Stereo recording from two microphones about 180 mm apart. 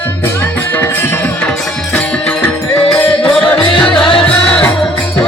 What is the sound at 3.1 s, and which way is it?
Music, 30° left (ahead or behind).